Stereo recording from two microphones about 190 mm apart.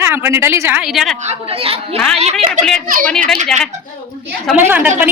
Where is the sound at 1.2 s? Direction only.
35° right (ahead or behind).